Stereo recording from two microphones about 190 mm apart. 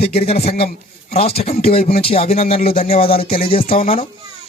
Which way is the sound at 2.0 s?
30° left (ahead or behind).